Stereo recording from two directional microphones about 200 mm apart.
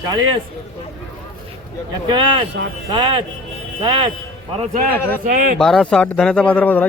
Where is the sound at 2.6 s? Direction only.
60° right (ahead or behind).